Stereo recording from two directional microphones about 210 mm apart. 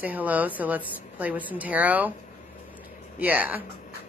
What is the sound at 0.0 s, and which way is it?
Speech, 5° right (ahead or behind).